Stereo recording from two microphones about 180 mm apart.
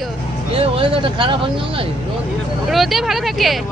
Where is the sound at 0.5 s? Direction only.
30° right (ahead or behind).